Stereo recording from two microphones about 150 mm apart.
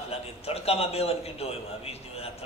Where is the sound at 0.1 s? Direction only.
40° left (ahead or behind).